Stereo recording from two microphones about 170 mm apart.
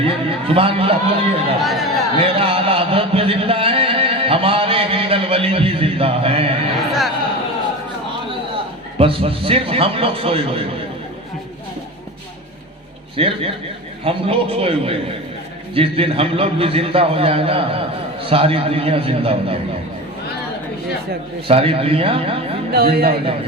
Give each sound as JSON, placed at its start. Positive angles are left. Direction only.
{"t": 0.0, "sound": "a man's voice", "side_deg": -35}
{"t": 1.6, "sound": "speech", "side_deg": 0}
{"t": 2.2, "sound": "music", "side_deg": -35}
{"t": 6.7, "sound": "a sound", "side_deg": 0}
{"t": 9.0, "sound": "a man's voice", "side_deg": -35}
{"t": 13.1, "sound": "a man's voice", "side_deg": -35}
{"t": 21.4, "sound": "a man's voice", "side_deg": -35}
{"t": 22.7, "sound": "speech", "side_deg": -65}